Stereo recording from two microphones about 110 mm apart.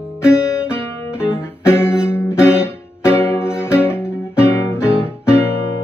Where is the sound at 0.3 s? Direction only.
25° left (ahead or behind).